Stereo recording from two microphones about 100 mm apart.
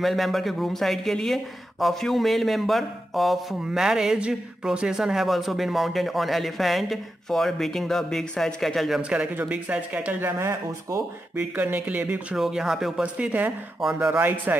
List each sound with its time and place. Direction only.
0.0 s speech: centre (ahead or behind)
9.1 s speech: 15° right (ahead or behind)
11.3 s speech: 20° right (ahead or behind)